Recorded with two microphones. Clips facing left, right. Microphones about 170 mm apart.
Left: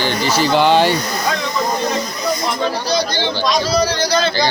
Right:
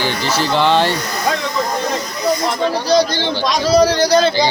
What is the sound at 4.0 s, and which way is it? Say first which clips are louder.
Speech: right 5 dB; 45° right (ahead or behind).